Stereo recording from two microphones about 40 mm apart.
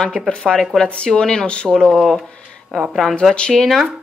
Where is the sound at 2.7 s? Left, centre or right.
Centre.